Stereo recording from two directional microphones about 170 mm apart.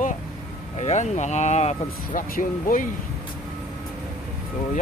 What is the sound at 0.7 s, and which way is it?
Speech, 40° left (ahead or behind).